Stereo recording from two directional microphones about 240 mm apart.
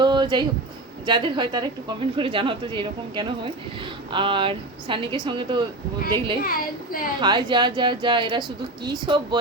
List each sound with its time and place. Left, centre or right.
0.0 s a sound: centre
1.0 s a woman's voice: centre
6.4 s speech: left
7.2 s a woman's voice: centre